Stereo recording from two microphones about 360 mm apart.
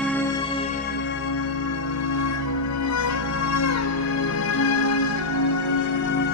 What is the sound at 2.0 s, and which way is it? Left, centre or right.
Music, left.